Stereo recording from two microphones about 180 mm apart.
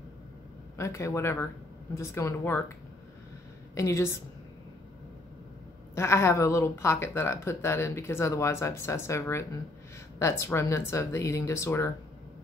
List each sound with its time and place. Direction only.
0.7 s speech: 15° left (ahead or behind)
3.7 s speech: 15° left (ahead or behind)
5.9 s speech: 15° left (ahead or behind)